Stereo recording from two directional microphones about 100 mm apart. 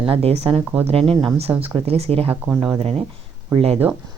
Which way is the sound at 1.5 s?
25° right (ahead or behind).